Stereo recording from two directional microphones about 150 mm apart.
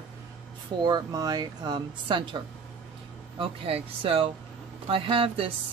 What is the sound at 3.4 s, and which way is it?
Speech, 40° right (ahead or behind).